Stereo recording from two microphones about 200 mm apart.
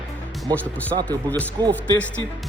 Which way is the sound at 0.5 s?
10° left (ahead or behind).